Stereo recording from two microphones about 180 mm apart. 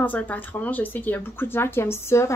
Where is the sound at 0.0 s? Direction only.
10° left (ahead or behind).